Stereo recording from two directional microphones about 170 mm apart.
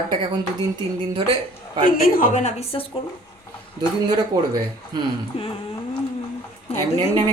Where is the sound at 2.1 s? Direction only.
45° left (ahead or behind).